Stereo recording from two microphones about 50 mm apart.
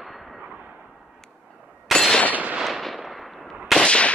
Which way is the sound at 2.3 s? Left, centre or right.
Right.